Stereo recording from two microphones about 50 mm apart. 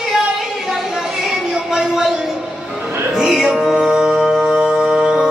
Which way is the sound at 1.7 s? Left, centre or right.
Centre.